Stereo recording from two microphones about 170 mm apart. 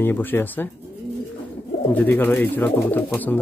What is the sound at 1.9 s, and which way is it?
Speech, 10° left (ahead or behind).